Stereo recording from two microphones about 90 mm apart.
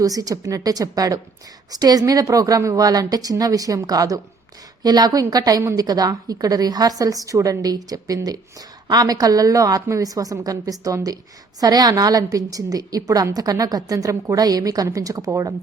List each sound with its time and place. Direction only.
0.0 s a woman's voice: 40° right (ahead or behind)